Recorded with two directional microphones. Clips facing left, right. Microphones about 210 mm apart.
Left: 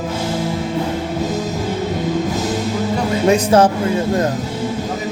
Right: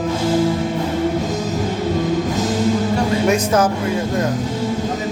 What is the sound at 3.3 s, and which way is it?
Music, 30° left (ahead or behind).